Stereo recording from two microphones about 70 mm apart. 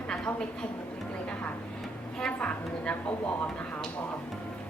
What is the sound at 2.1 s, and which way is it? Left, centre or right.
Speech, centre.